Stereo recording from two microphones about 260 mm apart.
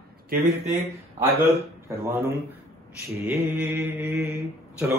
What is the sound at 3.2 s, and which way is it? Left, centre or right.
Speech, centre.